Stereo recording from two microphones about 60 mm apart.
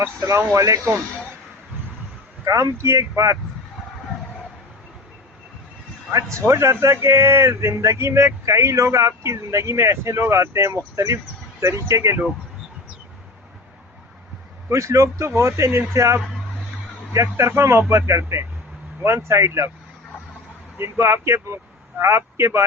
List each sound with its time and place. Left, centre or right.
0.2 s speech: right
0.5 s speech: right
2.4 s speech: right
6.1 s speech: right
14.7 s speech: right
17.6 s speech: right
20.7 s speech: right